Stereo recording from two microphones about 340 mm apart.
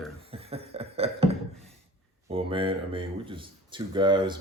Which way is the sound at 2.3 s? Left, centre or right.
Centre.